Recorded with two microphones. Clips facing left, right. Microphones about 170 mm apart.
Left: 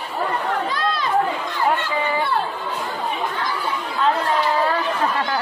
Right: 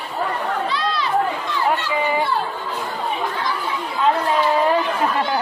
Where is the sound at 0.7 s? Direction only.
50° left (ahead or behind).